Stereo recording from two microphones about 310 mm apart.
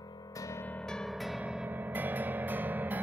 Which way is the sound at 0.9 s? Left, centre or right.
Centre.